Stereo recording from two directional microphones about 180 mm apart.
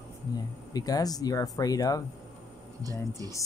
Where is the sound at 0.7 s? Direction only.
20° left (ahead or behind).